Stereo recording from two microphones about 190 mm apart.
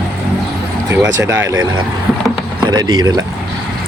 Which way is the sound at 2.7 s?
20° right (ahead or behind).